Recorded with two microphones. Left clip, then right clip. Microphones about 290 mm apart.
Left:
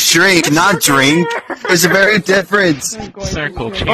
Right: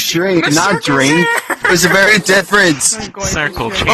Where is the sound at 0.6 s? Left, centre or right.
Left.